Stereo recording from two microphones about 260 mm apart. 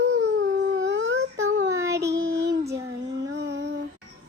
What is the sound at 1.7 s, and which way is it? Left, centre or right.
Child singing, centre.